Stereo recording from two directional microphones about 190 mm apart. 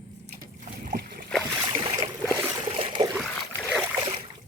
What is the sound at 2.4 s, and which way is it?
Trickle, 15° right (ahead or behind).